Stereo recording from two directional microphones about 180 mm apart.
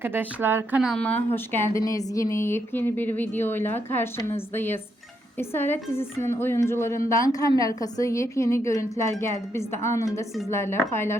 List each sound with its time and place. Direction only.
0.0 s speech: 10° right (ahead or behind); by 11.2 s 15° left (ahead or behind)